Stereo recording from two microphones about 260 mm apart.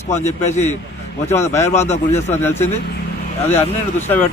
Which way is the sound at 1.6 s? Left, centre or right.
Left.